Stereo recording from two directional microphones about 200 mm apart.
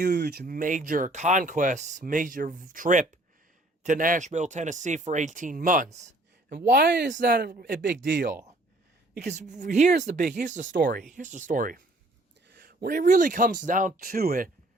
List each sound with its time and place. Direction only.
0.0 s speech: 55° right (ahead or behind); by 6.1 s 40° right (ahead or behind)
6.5 s speech: 50° right (ahead or behind)
7.1 s speech: 45° right (ahead or behind)
9.2 s speech: 35° right (ahead or behind)